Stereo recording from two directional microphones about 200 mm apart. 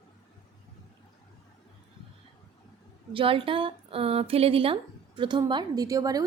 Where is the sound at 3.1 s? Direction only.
25° right (ahead or behind).